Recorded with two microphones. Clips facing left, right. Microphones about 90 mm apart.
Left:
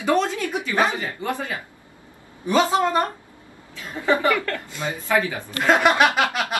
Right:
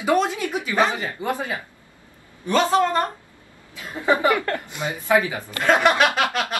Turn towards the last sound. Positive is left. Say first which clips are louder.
# left 1 dB
turn(degrees=15)  # may be behind; listen again after turning